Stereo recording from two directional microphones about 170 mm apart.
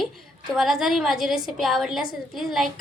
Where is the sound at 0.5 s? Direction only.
Centre (ahead or behind).